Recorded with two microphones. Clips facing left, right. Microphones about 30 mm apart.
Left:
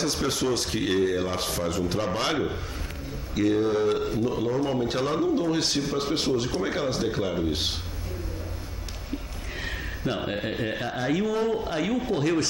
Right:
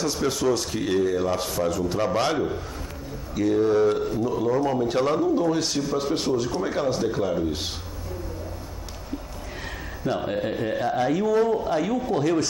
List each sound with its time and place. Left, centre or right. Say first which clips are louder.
0.0 s speech: right 2 dB; left
9.6 s speech: left 2 dB; centre